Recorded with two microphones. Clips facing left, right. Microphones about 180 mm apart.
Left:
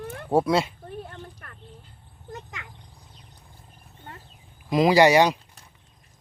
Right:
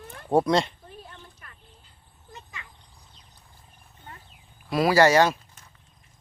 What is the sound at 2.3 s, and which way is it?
Insect, 75° left (ahead or behind).